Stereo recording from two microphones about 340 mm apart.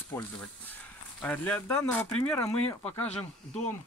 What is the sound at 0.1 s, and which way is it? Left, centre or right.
Speech, centre.